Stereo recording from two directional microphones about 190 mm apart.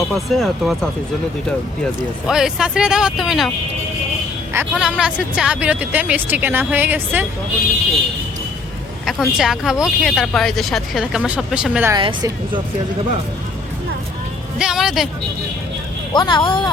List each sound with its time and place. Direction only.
0.1 s speech: centre (ahead or behind)
2.0 s speech: 5° right (ahead or behind)
4.5 s speech: 5° right (ahead or behind)
9.0 s speech: centre (ahead or behind)
11.9 s a woman's voice: 25° right (ahead or behind)
14.6 s a woman's voice: 5° right (ahead or behind)
16.1 s speech: 25° left (ahead or behind)